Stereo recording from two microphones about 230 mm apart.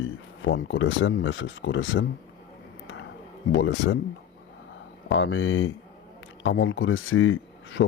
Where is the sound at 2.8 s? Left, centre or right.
Left.